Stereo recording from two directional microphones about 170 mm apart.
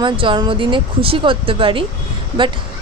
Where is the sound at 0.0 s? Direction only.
30° right (ahead or behind).